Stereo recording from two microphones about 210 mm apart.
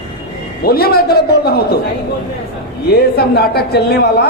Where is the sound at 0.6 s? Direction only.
45° left (ahead or behind).